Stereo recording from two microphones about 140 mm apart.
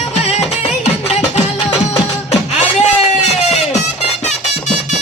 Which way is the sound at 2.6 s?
55° left (ahead or behind).